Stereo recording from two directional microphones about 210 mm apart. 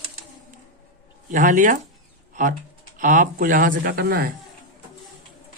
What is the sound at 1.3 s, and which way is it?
A man's voice, 40° right (ahead or behind).